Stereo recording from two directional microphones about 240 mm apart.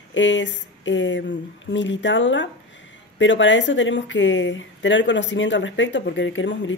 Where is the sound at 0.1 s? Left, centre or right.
Left.